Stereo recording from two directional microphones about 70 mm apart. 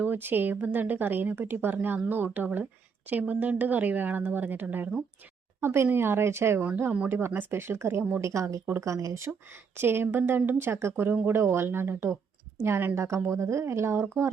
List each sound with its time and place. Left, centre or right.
0.0 s a woman's voice: right
9.7 s speech: right